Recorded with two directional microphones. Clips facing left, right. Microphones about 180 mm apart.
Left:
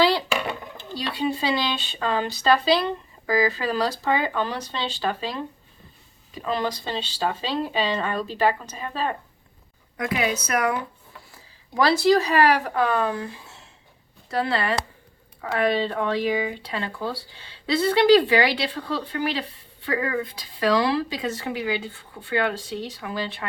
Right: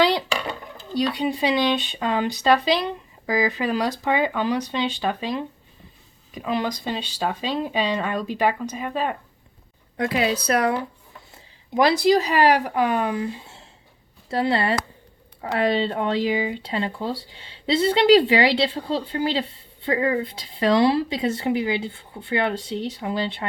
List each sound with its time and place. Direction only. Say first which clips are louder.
0.9 s speech: right 3 dB; 20° right (ahead or behind)
6.4 s speech: right 1 dB; 10° right (ahead or behind)
10.0 s speech: right 3 dB; 30° right (ahead or behind)
11.3 s speech: right 8 dB; 20° right (ahead or behind)
14.3 s speech: right 3 dB; 25° right (ahead or behind)